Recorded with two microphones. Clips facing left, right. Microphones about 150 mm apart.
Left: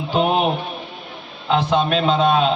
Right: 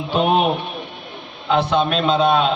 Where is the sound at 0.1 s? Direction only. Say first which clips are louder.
Right 1 dB; 65° right (ahead or behind).